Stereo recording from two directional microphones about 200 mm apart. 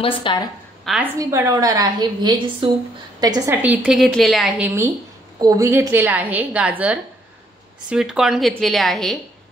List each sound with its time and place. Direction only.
0.0 s a woman's voice: 25° left (ahead or behind)
1.1 s a woman's voice: 15° right (ahead or behind)
3.6 s a woman's voice: 5° right (ahead or behind)